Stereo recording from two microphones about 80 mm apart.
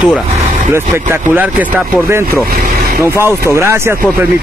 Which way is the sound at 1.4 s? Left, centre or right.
Right.